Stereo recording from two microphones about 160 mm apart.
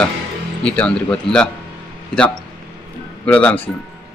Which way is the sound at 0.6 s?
5° left (ahead or behind).